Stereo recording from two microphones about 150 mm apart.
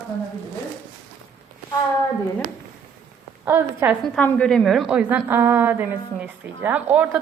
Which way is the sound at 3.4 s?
15° right (ahead or behind).